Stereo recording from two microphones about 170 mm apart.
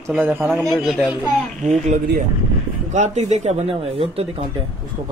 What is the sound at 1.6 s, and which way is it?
Speech, 40° right (ahead or behind).